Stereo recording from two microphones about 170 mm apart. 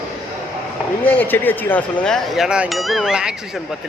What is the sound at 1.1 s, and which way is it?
Speech, 10° left (ahead or behind).